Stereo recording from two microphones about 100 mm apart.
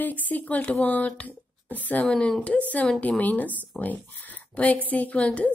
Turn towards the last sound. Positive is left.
turn(degrees=15)  # may be behind; listen again after turning